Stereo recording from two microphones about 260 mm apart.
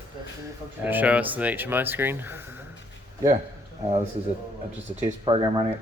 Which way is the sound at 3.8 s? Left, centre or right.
Right.